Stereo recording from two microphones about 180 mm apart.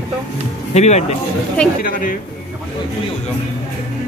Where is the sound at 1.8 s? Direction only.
50° left (ahead or behind).